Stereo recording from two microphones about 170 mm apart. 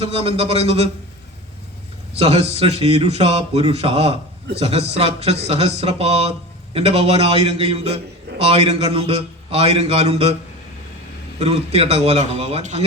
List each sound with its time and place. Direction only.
0.0 s a man's voice: 35° right (ahead or behind)
2.1 s a man's voice: 40° right (ahead or behind)
11.3 s a man's voice: 40° right (ahead or behind)